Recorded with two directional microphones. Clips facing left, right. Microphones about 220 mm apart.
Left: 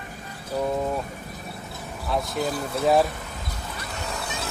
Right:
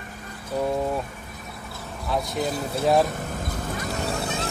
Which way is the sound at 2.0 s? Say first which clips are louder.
Even; centre (ahead or behind).